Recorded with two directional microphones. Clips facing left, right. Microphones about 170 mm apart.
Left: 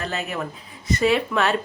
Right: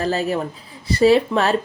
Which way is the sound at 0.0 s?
35° right (ahead or behind).